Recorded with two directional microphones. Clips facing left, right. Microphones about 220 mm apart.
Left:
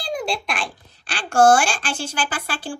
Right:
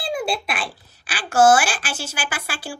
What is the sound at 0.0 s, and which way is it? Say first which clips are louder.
A woman's voice: right 1 dB; 5° right (ahead or behind).